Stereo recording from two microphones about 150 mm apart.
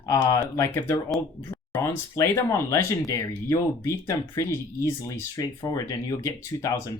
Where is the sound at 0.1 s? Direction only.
20° left (ahead or behind).